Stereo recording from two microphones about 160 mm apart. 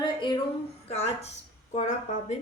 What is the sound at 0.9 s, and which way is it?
A woman's voice, 40° left (ahead or behind).